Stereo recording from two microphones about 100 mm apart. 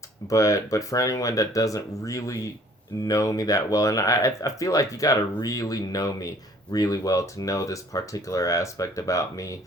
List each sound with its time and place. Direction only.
0.3 s speech: 35° left (ahead or behind)